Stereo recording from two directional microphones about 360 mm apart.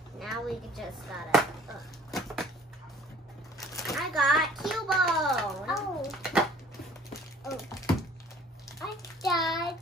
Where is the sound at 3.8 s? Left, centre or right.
Centre.